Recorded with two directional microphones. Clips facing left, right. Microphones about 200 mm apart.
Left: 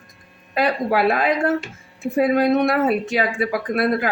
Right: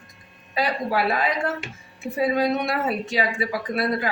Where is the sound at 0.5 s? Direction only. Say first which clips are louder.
Left 4 dB; 55° left (ahead or behind).